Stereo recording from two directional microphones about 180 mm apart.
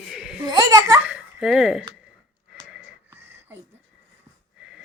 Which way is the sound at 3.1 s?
10° right (ahead or behind).